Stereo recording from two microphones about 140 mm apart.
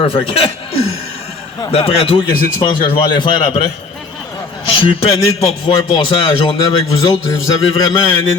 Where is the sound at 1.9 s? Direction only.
45° left (ahead or behind).